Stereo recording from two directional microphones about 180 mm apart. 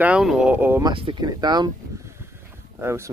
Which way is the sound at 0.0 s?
5° right (ahead or behind).